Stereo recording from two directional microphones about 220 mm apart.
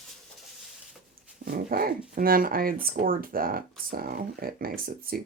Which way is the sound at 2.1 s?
40° right (ahead or behind).